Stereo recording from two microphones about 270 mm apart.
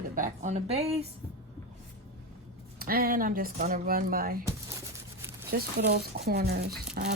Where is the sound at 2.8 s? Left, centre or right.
Right.